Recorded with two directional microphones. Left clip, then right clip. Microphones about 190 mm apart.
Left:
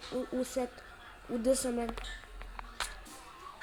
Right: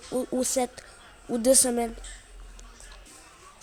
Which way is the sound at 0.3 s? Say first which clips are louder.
Right 8 dB; 65° right (ahead or behind).